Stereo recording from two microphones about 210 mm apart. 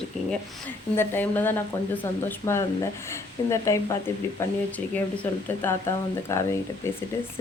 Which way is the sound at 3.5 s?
15° left (ahead or behind).